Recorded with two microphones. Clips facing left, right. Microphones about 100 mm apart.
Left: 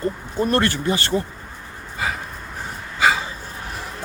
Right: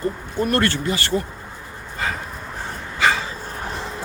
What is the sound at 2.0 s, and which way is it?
Dog, 10° left (ahead or behind).